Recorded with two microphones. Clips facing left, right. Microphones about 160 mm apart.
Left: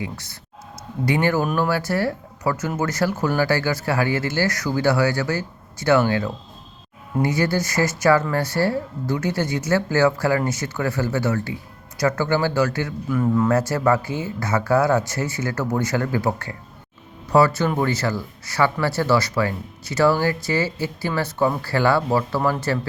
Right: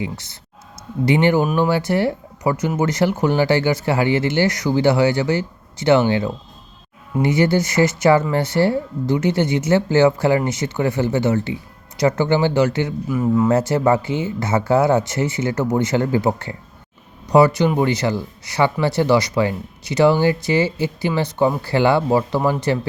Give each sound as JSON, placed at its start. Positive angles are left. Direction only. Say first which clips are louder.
{"t": 0.0, "sound": "speech", "louder": "right 4 dB", "side_deg": -20}
{"t": 13.1, "sound": "speech", "louder": "right 1 dB", "side_deg": -10}
{"t": 13.5, "sound": "speech", "louder": "right 3 dB", "side_deg": -20}